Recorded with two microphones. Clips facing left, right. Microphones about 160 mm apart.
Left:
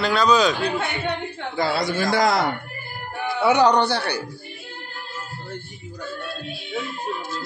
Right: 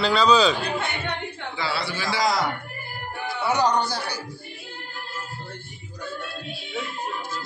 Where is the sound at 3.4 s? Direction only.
70° left (ahead or behind).